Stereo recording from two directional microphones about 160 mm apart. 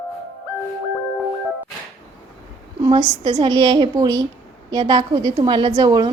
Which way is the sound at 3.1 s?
25° right (ahead or behind).